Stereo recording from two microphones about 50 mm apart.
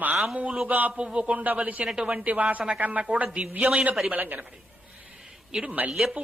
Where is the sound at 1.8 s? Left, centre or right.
Centre.